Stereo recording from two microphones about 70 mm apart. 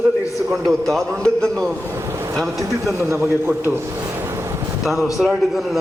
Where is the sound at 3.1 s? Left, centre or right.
Right.